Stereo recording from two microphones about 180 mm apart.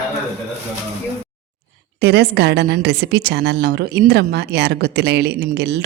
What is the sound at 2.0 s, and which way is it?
A woman's voice, 70° right (ahead or behind).